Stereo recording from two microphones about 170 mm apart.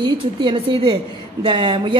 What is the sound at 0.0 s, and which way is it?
A woman's voice, 25° right (ahead or behind).